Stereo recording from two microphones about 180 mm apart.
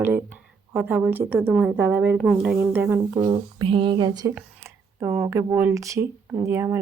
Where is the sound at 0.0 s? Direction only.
10° right (ahead or behind).